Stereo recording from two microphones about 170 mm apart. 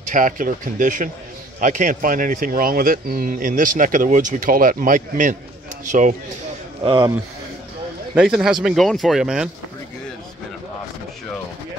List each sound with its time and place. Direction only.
0.1 s speech: 50° right (ahead or behind)
6.8 s speech: 30° right (ahead or behind)
8.1 s speech: 5° right (ahead or behind)